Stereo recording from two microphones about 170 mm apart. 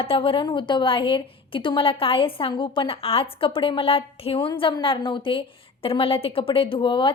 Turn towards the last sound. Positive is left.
turn(degrees=30)  # may be behind; listen again after turning